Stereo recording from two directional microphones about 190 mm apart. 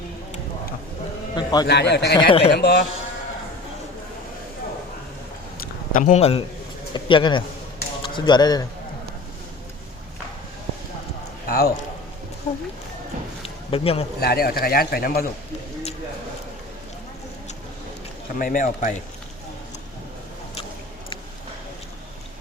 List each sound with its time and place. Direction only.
1.4 s a man's voice: 20° left (ahead or behind)
1.6 s a man's voice: 65° left (ahead or behind)
2.1 s a man's voice: 30° left (ahead or behind)
2.5 s a man's voice: 60° left (ahead or behind)
5.9 s a man's voice: 40° left (ahead or behind); by 8.6 s 20° left (ahead or behind)
11.4 s a man's voice: 55° left (ahead or behind)
12.5 s a man's voice: 35° left (ahead or behind)
13.4 s a sound: 30° left (ahead or behind)
14.2 s a man's voice: 55° left (ahead or behind)
18.3 s a man's voice: 45° left (ahead or behind)